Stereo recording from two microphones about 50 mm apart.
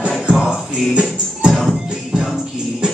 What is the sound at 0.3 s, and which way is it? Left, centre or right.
Music, centre.